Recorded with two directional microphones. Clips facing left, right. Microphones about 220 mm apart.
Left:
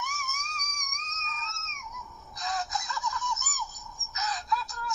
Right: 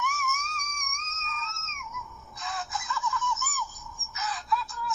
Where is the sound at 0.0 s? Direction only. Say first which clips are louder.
Right 6 dB; 35° left (ahead or behind).